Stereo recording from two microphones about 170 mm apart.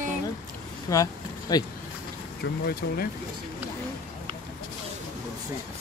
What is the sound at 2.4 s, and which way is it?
Speech, 70° left (ahead or behind).